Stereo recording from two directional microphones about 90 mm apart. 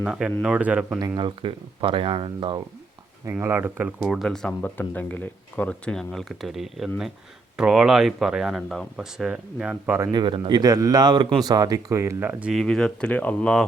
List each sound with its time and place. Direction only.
0.0 s speech: 10° right (ahead or behind)
1.1 s speech: 70° right (ahead or behind)
3.4 s speech: 25° right (ahead or behind)
3.8 s speech: 5° right (ahead or behind)
4.6 s speech: 20° left (ahead or behind); by 9.0 s 5° left (ahead or behind)
9.1 s speech: 10° right (ahead or behind)
10.1 s speech: 60° right (ahead or behind)
10.6 s a man's voice: 40° right (ahead or behind)
12.2 s speech: 15° right (ahead or behind)
12.5 s speech: 10° left (ahead or behind)